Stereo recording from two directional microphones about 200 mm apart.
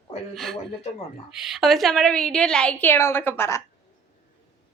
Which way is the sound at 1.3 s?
Centre (ahead or behind).